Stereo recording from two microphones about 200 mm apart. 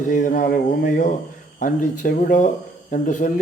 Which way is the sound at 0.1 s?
40° left (ahead or behind).